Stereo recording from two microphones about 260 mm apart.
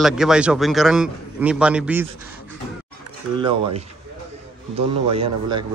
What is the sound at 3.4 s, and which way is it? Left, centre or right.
Speech, centre.